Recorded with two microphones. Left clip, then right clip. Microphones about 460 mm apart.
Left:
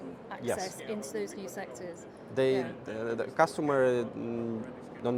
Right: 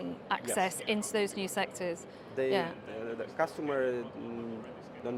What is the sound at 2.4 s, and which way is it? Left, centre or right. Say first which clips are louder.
Speech: left 2 dB; left.